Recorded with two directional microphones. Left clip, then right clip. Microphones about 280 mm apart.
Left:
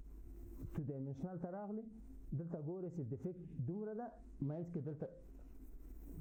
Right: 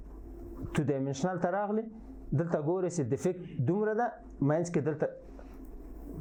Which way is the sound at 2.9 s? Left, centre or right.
Centre.